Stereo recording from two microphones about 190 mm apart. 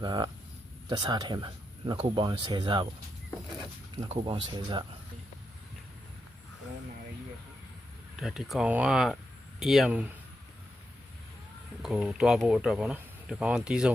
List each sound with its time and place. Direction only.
0.0 s speech: 20° right (ahead or behind)
4.1 s speech: 25° right (ahead or behind)
8.2 s speech: centre (ahead or behind)
11.8 s speech: centre (ahead or behind)